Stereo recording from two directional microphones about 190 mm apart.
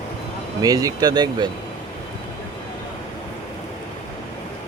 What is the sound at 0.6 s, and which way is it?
Speech, 20° right (ahead or behind).